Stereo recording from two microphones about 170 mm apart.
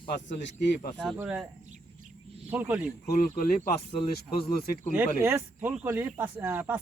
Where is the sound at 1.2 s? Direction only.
5° right (ahead or behind).